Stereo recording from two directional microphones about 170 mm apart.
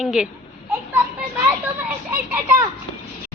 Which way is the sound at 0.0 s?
5° right (ahead or behind).